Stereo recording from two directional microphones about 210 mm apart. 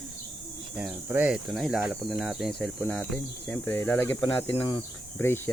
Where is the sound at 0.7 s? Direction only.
5° right (ahead or behind); by 4.6 s 10° left (ahead or behind).